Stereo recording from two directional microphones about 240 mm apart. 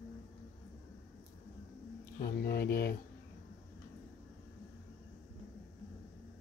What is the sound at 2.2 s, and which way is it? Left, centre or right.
Speech, left.